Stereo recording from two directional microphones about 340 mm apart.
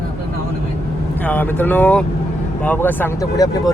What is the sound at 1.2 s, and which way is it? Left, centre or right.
Speech, centre.